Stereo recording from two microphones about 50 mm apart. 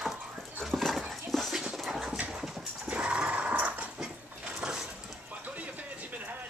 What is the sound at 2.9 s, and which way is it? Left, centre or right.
Sewing machine, right.